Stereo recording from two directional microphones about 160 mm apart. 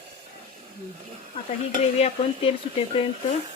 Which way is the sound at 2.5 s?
35° left (ahead or behind).